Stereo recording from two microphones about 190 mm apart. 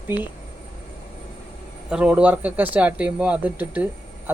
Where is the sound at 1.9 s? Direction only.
5° right (ahead or behind).